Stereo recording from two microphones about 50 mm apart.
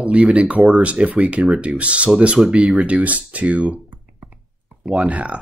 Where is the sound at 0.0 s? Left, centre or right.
Right.